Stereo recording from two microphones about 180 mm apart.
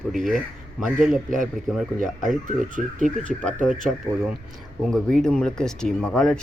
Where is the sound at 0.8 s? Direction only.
Centre (ahead or behind).